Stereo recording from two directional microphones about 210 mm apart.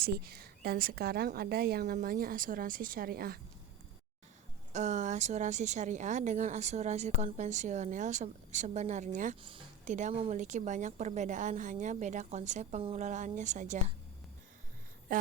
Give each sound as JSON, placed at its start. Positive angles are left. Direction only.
{"t": 0.0, "sound": "a woman's voice", "side_deg": -45}
{"t": 4.7, "sound": "a woman's voice", "side_deg": -35}
{"t": 15.1, "sound": "a sound", "side_deg": -40}